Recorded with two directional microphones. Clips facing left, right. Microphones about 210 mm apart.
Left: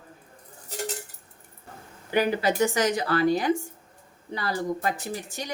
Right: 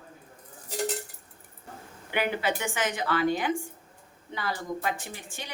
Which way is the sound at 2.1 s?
40° left (ahead or behind).